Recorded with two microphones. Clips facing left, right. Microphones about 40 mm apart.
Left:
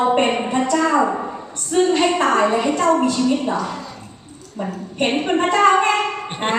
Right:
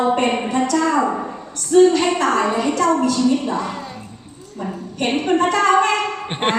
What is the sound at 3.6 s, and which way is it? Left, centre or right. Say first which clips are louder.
Speech: even; right.